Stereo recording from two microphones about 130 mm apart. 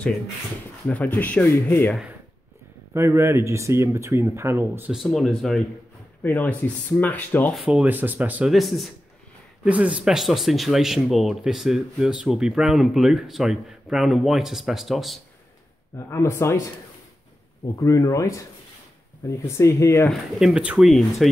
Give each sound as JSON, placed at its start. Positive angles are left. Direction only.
{"t": 0.8, "sound": "speech", "side_deg": 10}
{"t": 2.9, "sound": "speech", "side_deg": -20}
{"t": 4.9, "sound": "speech", "side_deg": 0}
{"t": 6.2, "sound": "speech", "side_deg": 15}
{"t": 7.5, "sound": "speech", "side_deg": -10}
{"t": 8.5, "sound": "speech", "side_deg": 0}
{"t": 9.7, "sound": "speech", "side_deg": -10}
{"t": 16.1, "sound": "speech", "side_deg": 20}
{"t": 17.7, "sound": "speech", "side_deg": 25}
{"t": 20.1, "sound": "speech", "side_deg": -5}